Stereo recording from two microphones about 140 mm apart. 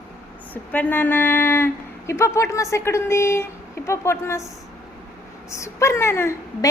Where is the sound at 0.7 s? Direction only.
15° left (ahead or behind).